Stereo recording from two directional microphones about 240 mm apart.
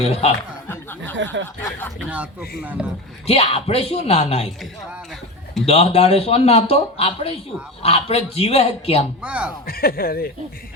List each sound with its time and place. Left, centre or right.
0.0 s a man's voice: left
0.7 s a sound: centre
1.1 s speech: right
2.0 s speech: centre
3.2 s a man's voice: left
5.6 s a man's voice: left
9.2 s speech: centre
9.6 s speech: left